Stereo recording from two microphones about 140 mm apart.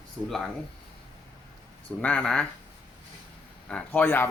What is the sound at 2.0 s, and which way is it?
Speech, 10° left (ahead or behind).